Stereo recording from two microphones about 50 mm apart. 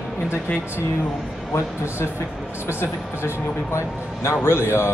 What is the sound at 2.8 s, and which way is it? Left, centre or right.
Speech, left.